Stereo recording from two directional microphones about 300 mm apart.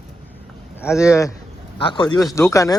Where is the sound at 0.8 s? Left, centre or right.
Centre.